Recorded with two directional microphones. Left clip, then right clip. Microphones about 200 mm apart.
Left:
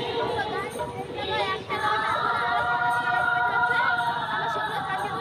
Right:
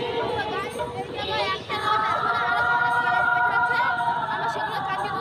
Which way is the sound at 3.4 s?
5° left (ahead or behind).